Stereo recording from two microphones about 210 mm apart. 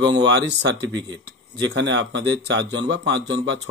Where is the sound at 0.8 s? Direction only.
20° right (ahead or behind).